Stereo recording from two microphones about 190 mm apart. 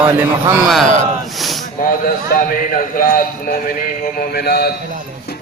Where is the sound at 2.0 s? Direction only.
45° left (ahead or behind).